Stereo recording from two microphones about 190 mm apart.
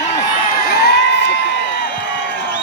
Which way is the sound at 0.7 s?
60° left (ahead or behind).